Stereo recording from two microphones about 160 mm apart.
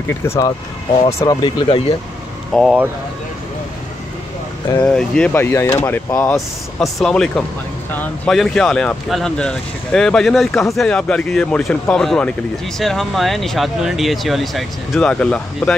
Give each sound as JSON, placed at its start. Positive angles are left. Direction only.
{"t": 0.2, "sound": "speech", "side_deg": 15}
{"t": 1.2, "sound": "speech", "side_deg": 25}
{"t": 2.5, "sound": "speech", "side_deg": 0}
{"t": 4.7, "sound": "speech", "side_deg": 5}
{"t": 6.3, "sound": "speech", "side_deg": 0}